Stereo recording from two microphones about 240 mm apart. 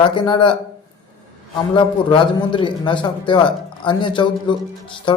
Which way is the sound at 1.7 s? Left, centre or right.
Left.